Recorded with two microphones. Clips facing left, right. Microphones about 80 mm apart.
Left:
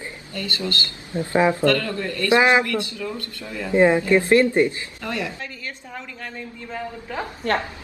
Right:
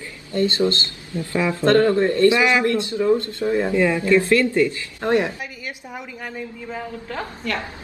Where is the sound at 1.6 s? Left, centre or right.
Right.